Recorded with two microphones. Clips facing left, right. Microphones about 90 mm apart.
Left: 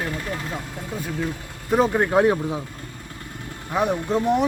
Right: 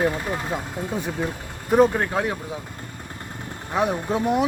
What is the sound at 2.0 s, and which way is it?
Speech, 20° left (ahead or behind).